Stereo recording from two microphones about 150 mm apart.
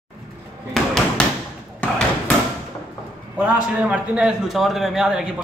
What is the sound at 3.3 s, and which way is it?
A man's voice, 10° right (ahead or behind).